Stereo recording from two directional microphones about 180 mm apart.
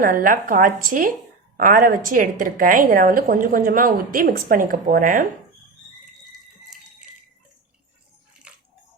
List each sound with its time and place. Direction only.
0.0 s a woman's voice: 50° right (ahead or behind)
8.5 s bathtub: 5° right (ahead or behind)